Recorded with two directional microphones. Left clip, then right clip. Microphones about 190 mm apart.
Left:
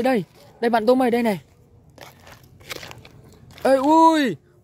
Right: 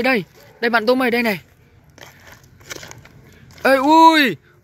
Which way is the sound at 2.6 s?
30° left (ahead or behind).